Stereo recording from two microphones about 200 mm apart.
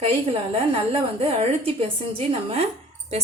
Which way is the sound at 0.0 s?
30° right (ahead or behind).